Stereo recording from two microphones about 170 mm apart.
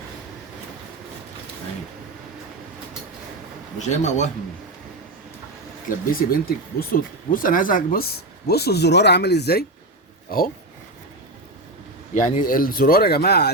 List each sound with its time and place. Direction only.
3.8 s speech: 45° left (ahead or behind)
6.1 s speech: 60° left (ahead or behind); by 9.6 s 75° left (ahead or behind)
10.2 s speech: 60° left (ahead or behind)
12.1 s speech: 50° left (ahead or behind); by 13.5 s 70° left (ahead or behind)